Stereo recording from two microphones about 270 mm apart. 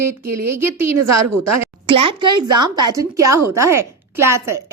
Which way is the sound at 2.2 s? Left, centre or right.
Right.